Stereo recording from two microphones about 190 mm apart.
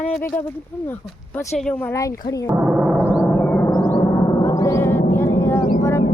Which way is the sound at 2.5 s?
Centre (ahead or behind).